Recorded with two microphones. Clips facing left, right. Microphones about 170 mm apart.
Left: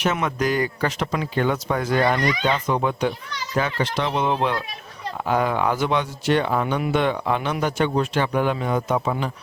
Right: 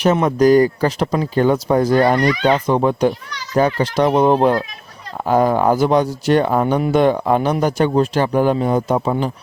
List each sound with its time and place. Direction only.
0.0 s speech: 35° right (ahead or behind)